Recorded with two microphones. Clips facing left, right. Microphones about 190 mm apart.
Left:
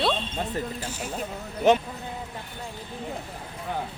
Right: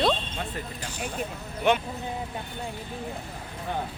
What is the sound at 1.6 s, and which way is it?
Speech, 40° left (ahead or behind).